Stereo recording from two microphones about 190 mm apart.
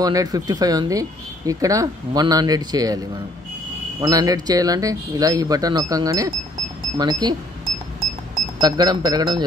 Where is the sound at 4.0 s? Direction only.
20° right (ahead or behind).